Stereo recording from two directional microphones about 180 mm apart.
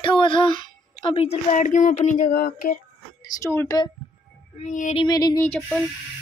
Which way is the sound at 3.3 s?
15° left (ahead or behind).